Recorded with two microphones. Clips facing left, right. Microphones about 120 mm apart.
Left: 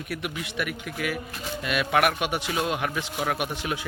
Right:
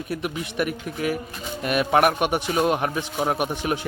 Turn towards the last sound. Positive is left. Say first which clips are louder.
# right 4 dB
turn(degrees=-40)  # may be behind; listen again after turning